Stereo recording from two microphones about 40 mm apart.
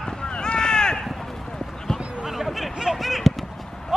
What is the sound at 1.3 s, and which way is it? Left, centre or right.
Run, centre.